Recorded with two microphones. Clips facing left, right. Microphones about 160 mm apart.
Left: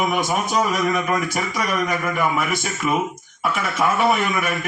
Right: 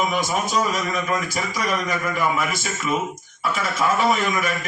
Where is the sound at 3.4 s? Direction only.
60° left (ahead or behind).